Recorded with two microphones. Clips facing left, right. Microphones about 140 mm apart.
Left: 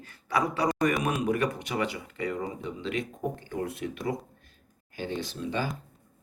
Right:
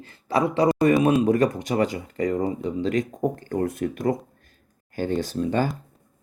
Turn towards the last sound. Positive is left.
turn(degrees=-45)  # may be behind; listen again after turning